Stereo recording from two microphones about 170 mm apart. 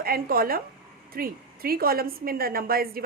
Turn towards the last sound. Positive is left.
turn(degrees=-60)  # may be behind; listen again after turning